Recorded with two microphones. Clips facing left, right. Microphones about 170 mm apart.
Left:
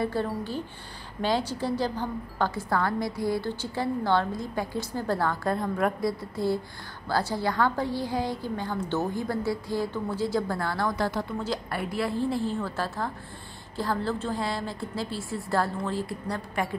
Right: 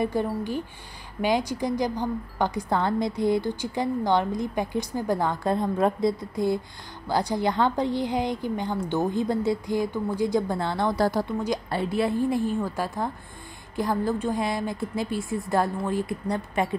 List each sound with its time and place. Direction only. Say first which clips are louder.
0.0 s a woman's voice: right 3 dB; 15° right (ahead or behind)
11.0 s a woman's voice: right 5 dB; 35° right (ahead or behind)
11.4 s a woman's voice: right 4 dB; 20° right (ahead or behind)